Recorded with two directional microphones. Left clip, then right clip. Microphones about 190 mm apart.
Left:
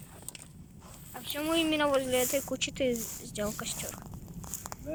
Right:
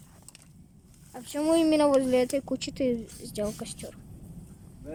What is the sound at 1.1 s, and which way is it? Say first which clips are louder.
Speech: right 5 dB; 30° right (ahead or behind).